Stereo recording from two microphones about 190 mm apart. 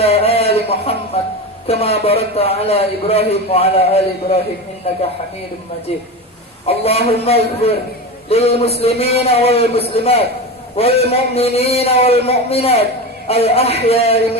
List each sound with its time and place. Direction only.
0.0 s a sound: 30° left (ahead or behind)
1.6 s a man's voice: 30° left (ahead or behind)
6.7 s a man's voice: 30° left (ahead or behind)